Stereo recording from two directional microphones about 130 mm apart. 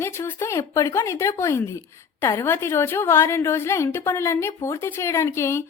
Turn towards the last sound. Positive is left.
turn(degrees=20)  # may be behind; listen again after turning